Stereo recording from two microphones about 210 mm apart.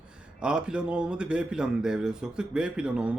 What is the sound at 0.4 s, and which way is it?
A man's voice, 5° right (ahead or behind).